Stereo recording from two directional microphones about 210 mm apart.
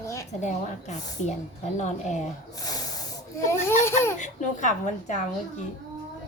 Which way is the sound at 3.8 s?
10° left (ahead or behind).